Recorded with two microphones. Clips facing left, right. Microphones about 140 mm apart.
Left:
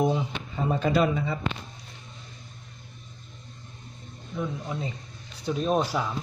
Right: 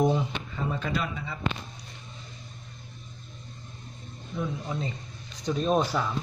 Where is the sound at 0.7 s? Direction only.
30° left (ahead or behind).